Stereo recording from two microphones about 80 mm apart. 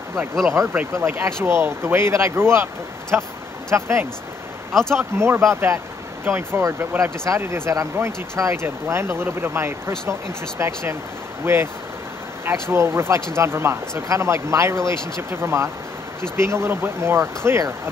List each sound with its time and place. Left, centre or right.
0.5 s speech: right
4.9 s speech: right